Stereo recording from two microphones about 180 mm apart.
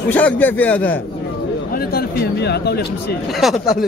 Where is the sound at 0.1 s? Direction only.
10° left (ahead or behind).